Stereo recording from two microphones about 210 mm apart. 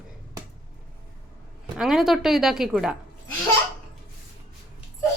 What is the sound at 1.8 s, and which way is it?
A woman's voice, centre (ahead or behind).